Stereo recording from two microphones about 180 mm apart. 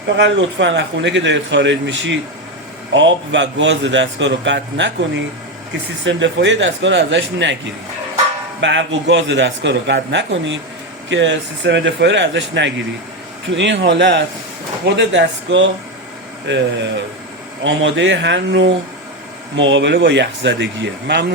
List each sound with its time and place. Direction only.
0.2 s a man's voice: 90° right
8.6 s a man's voice: 85° right
11.1 s a man's voice: 80° right